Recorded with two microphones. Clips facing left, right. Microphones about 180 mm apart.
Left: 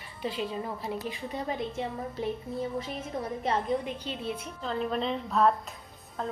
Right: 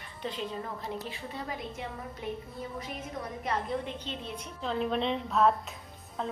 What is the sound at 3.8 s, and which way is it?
A woman's voice, 10° left (ahead or behind).